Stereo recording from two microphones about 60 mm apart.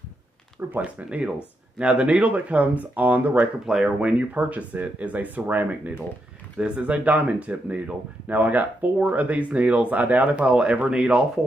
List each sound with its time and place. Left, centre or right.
0.7 s speech: right
3.6 s speech: centre
4.0 s speech: right